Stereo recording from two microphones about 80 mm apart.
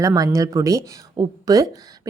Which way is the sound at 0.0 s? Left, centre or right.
Right.